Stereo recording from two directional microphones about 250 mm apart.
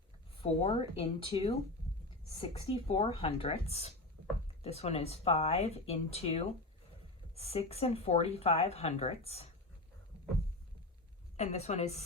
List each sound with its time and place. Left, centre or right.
0.4 s speech: left
2.7 s speech: left
4.2 s a sound: right
4.6 s speech: left
11.3 s speech: left